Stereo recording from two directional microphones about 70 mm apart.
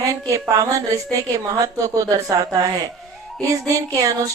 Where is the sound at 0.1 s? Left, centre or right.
Right.